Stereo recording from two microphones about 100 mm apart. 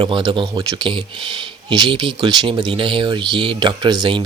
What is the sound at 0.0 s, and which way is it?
Speech, 50° right (ahead or behind).